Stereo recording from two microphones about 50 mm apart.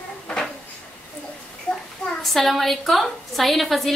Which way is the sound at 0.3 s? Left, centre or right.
Centre.